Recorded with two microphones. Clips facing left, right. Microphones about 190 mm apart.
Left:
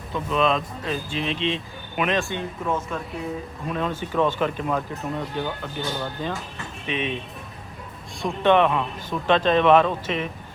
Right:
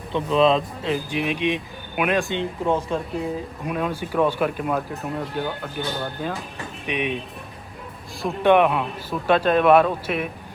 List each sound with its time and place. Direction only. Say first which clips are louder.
0.1 s speech: right 4 dB; 30° right (ahead or behind)
0.9 s speech: right 3 dB; 15° right (ahead or behind)
3.7 s speech: right 1 dB; 10° right (ahead or behind)
8.2 s speech: right 2 dB; 10° right (ahead or behind)